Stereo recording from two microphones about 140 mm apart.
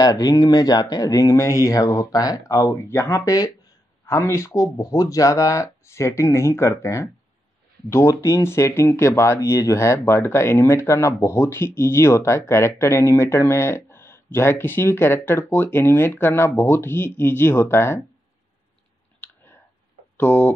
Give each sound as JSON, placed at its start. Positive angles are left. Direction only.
{"t": 0.0, "sound": "speech", "side_deg": 25}
{"t": 20.2, "sound": "speech", "side_deg": 15}